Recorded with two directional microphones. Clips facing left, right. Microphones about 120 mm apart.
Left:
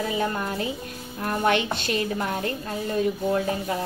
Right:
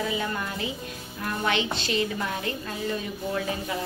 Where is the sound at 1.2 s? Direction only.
45° left (ahead or behind).